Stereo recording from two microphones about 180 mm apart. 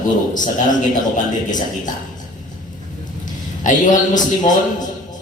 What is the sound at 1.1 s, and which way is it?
Speech, 45° left (ahead or behind).